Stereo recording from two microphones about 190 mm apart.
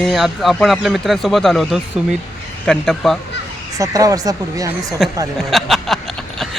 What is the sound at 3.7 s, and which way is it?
Speech, 20° right (ahead or behind).